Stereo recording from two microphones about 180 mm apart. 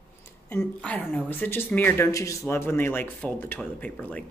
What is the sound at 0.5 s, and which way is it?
A woman's voice, 5° left (ahead or behind).